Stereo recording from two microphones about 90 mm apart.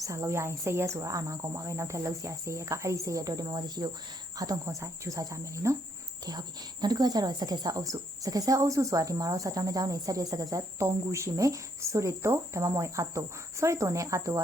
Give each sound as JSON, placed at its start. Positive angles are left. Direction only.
{"t": 0.0, "sound": "speech", "side_deg": -35}
{"t": 6.8, "sound": "speech", "side_deg": -45}